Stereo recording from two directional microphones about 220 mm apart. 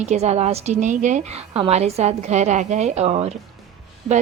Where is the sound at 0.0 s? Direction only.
30° right (ahead or behind).